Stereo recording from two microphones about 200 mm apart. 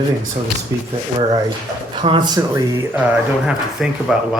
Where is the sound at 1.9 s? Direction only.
25° right (ahead or behind).